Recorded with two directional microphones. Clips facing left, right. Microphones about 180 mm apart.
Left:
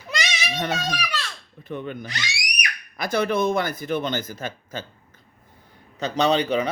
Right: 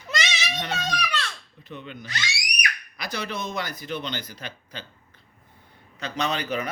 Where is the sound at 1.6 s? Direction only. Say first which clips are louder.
Left 7 dB; 50° left (ahead or behind).